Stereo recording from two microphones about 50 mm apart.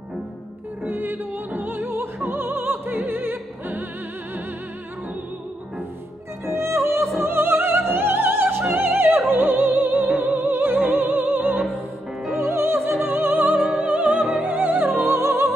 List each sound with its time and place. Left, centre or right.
0.8 s music: right
2.2 s opera: right
6.4 s music: right
7.2 s music: right
12.4 s music: right